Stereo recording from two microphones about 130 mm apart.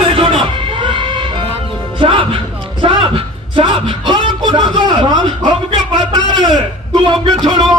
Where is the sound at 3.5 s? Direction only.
40° right (ahead or behind).